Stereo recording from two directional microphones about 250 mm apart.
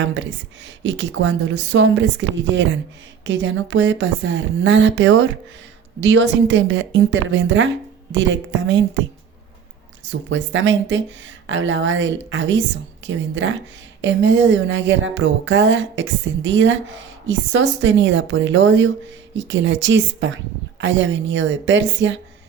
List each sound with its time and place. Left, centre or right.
0.0 s music: right
3.2 s music: right
10.1 s music: right